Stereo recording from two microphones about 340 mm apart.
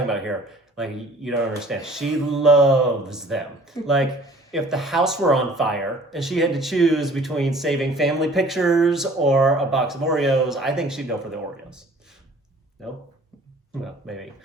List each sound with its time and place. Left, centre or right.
0.1 s speech: centre
13.8 s speech: centre